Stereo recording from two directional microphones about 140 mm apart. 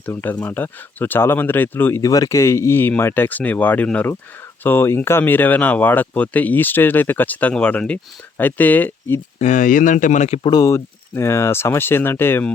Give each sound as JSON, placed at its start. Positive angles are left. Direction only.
{"t": 0.0, "sound": "speech", "side_deg": 15}
{"t": 9.4, "sound": "speech", "side_deg": 65}
{"t": 10.4, "sound": "speech", "side_deg": 25}